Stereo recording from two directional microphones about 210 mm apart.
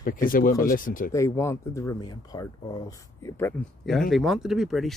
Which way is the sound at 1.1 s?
15° left (ahead or behind).